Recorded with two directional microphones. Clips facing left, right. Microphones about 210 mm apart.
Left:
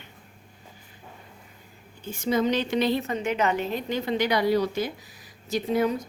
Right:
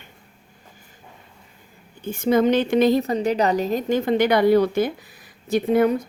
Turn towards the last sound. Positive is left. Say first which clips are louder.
# right 6 dB
turn(degrees=-55)  # may be behind; listen again after turning